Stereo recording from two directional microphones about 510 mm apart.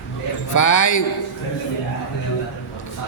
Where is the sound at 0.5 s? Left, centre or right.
Left.